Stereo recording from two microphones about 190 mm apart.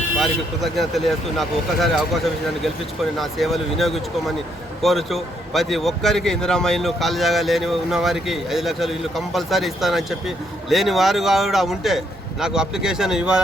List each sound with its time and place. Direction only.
0.2 s a man's voice: centre (ahead or behind)